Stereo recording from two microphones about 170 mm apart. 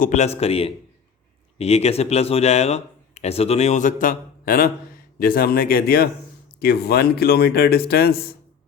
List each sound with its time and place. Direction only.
0.0 s a man's voice: 45° left (ahead or behind); by 8.3 s 65° left (ahead or behind)